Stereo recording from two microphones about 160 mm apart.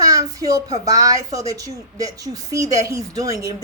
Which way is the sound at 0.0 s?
20° right (ahead or behind).